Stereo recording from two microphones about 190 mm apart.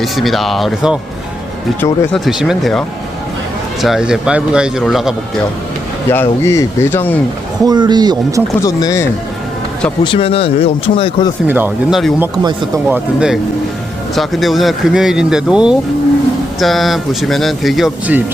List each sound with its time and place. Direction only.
0.0 s a man's voice: centre (ahead or behind)
6.1 s speech: 15° left (ahead or behind)
7.6 s speech: 20° right (ahead or behind)
8.6 s speech: 15° left (ahead or behind)
10.0 s speech: 30° left (ahead or behind)
11.4 s a man's voice: 10° right (ahead or behind)
12.2 s speech: 20° right (ahead or behind)
12.9 s a man's voice: 5° right (ahead or behind)